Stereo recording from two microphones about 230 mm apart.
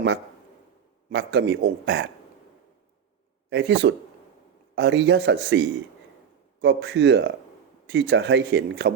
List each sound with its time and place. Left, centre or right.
1.1 s speech: right
3.5 s speech: right